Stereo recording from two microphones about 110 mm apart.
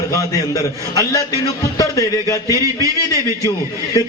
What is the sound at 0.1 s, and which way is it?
A man's voice, 30° left (ahead or behind).